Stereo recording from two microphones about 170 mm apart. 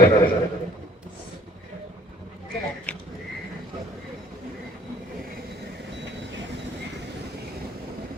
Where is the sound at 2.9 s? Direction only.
5° left (ahead or behind).